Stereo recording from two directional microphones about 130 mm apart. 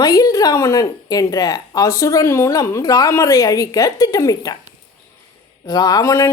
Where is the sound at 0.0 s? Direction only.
30° left (ahead or behind).